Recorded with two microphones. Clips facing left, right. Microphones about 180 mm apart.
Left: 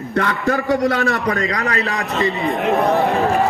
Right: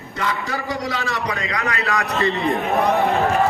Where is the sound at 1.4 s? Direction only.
40° left (ahead or behind).